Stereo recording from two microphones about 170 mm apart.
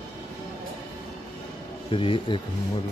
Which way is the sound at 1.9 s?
30° left (ahead or behind).